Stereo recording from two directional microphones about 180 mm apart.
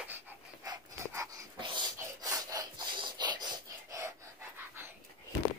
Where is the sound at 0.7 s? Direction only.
15° right (ahead or behind).